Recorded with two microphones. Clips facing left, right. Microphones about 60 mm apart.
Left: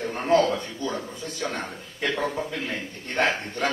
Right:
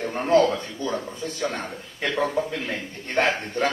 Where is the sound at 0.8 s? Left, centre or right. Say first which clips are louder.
Right 5 dB; right.